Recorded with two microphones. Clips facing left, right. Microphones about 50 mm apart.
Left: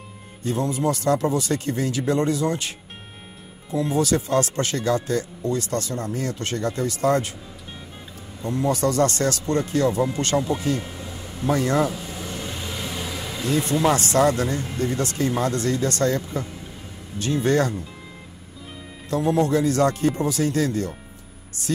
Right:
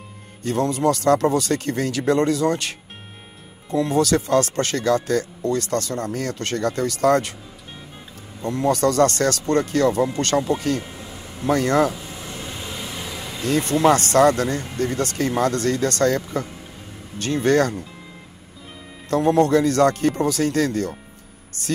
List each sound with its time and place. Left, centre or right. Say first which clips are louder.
0.4 s speech: right 3 dB; right
3.7 s speech: right 3 dB; right
8.5 s speech: right 3 dB; right
10.8 s vehicle: left 1 dB; centre
11.4 s speech: right 3 dB; right
11.9 s vehicle: left 2 dB; centre
13.4 s speech: right 3 dB; right
19.0 s speech: right 4 dB; right